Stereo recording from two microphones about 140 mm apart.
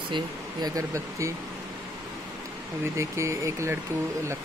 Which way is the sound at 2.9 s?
20° right (ahead or behind).